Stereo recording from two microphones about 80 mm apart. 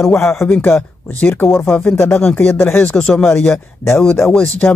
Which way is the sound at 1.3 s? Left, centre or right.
Left.